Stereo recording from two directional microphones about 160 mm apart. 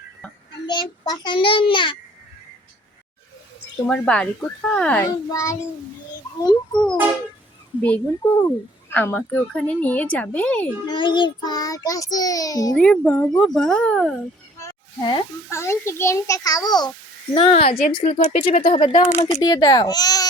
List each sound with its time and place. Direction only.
0.7 s child singing: 30° left (ahead or behind)
1.2 s a child's voice: 30° left (ahead or behind)
3.8 s a child's voice: 5° left (ahead or behind)
5.3 s child singing: 20° left (ahead or behind)
7.8 s a woman's voice: 10° left (ahead or behind)
10.8 s child singing: 30° left (ahead or behind)
12.7 s a child's voice: 5° left (ahead or behind)
14.6 s a sound: 25° left (ahead or behind)
15.4 s child singing: 15° left (ahead or behind)
17.3 s a child's voice: 40° left (ahead or behind)
18.7 s a child's voice: 30° left (ahead or behind)
19.4 s child singing: 25° left (ahead or behind)